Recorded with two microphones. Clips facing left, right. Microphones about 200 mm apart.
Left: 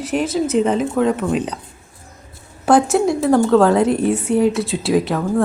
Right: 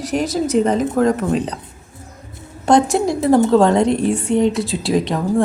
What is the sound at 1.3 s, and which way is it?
Speech, 35° right (ahead or behind).